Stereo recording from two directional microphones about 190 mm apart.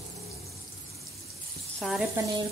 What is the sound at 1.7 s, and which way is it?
Speech, centre (ahead or behind).